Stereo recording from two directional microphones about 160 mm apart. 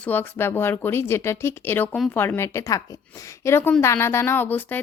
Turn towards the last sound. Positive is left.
turn(degrees=10)  # may be behind; listen again after turning